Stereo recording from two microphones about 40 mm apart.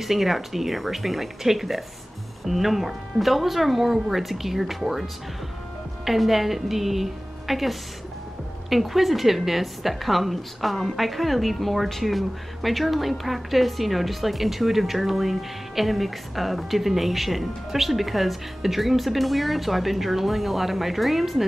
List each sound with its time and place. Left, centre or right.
0.0 s a woman's voice: centre